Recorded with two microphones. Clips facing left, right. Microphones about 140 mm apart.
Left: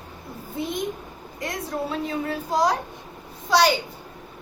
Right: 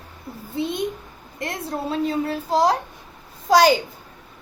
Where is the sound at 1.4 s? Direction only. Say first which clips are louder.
Right 1 dB; 30° right (ahead or behind).